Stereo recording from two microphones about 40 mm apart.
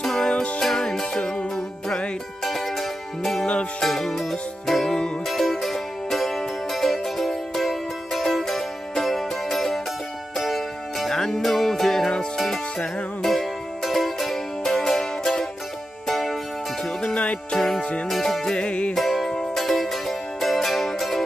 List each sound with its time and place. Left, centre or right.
0.0 s music: centre
0.3 s music: left
0.6 s music: centre
1.2 s music: left
2.4 s music: centre
13.2 s music: centre
17.0 s music: left
17.6 s music: centre
18.6 s music: left
18.9 s music: centre